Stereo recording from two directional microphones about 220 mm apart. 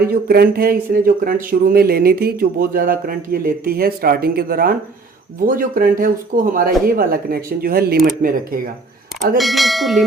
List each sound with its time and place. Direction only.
0.0 s speech: 45° right (ahead or behind)
9.4 s speech: centre (ahead or behind)